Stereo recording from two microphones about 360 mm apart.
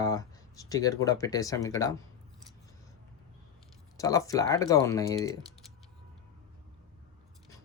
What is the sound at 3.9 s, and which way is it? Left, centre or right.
Speech, centre.